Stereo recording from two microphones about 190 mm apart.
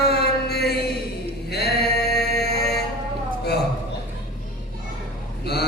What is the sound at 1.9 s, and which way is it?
Music, 60° left (ahead or behind).